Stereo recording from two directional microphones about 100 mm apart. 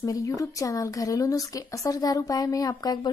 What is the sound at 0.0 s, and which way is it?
A woman's voice, 35° left (ahead or behind).